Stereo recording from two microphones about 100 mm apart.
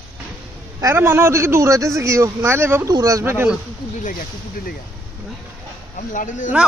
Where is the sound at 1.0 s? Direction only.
25° right (ahead or behind).